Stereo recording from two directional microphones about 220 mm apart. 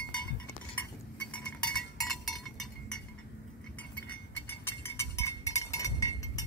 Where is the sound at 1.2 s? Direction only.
5° left (ahead or behind).